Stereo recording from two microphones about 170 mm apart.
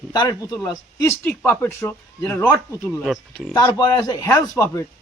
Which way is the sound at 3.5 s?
25° left (ahead or behind).